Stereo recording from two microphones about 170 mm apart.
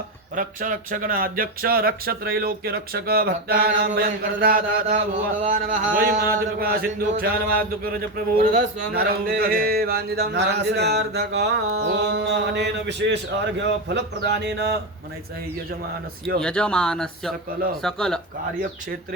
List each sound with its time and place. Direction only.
0.3 s speech: 55° right (ahead or behind)
5.1 s speech: 50° right (ahead or behind)
6.0 s speech: 60° right (ahead or behind)
8.9 s a sound: 65° right (ahead or behind)
16.4 s speech: 5° left (ahead or behind)